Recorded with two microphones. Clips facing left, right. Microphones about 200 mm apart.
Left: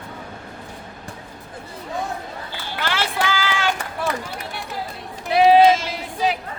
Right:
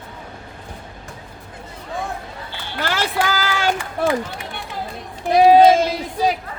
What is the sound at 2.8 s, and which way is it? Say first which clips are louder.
Run: right 3 dB; 40° right (ahead or behind).